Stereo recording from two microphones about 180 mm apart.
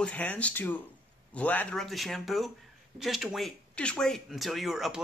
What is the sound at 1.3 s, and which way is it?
Speech, 10° left (ahead or behind).